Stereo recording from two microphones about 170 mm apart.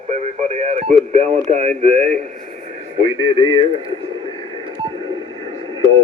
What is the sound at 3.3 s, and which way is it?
Speech, 25° left (ahead or behind).